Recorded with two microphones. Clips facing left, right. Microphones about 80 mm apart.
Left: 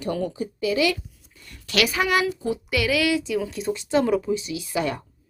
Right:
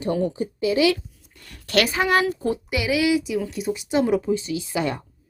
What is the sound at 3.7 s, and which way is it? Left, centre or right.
Speech, centre.